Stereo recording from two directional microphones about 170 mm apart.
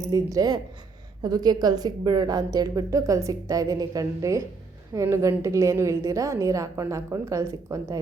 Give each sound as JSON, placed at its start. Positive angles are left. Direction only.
{"t": 0.1, "sound": "a woman's voice", "side_deg": -20}